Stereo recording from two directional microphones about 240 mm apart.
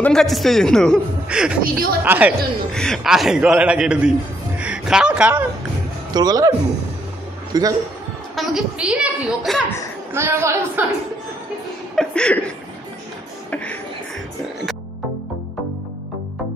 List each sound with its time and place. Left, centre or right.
0.0 s a man's voice: centre
1.6 s speech: right
2.0 s a man's voice: centre
6.1 s a woman's voice: centre
7.5 s a woman's voice: centre
8.4 s a man's voice: centre
11.9 s speech: centre